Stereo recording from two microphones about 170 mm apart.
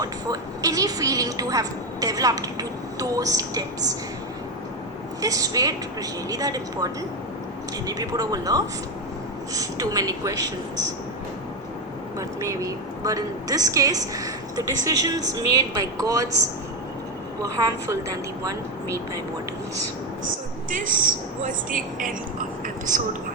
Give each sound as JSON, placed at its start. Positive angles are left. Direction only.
{"t": 0.0, "sound": "a woman's voice", "side_deg": -20}
{"t": 5.2, "sound": "a woman's voice", "side_deg": -20}
{"t": 12.4, "sound": "a woman's voice", "side_deg": -20}
{"t": 17.4, "sound": "a woman's voice", "side_deg": -20}
{"t": 20.7, "sound": "speech", "side_deg": -50}